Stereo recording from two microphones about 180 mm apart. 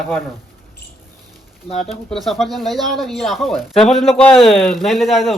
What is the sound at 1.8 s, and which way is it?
Speech, centre (ahead or behind).